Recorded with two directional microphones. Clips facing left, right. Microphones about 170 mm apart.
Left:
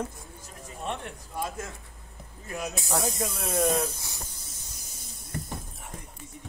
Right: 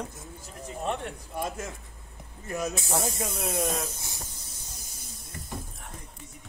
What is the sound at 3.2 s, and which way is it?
Speech, 30° right (ahead or behind).